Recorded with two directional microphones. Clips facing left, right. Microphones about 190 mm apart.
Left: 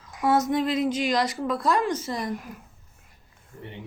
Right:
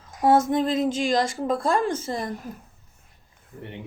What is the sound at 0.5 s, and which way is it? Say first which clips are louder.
A woman's voice: right 1 dB; 45° right (ahead or behind).